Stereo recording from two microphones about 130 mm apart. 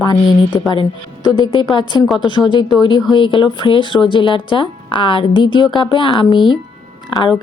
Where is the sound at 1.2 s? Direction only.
30° left (ahead or behind).